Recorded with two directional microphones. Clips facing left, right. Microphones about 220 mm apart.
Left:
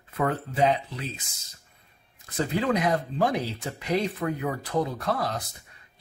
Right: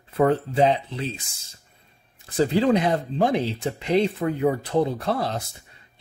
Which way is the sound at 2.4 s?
30° right (ahead or behind).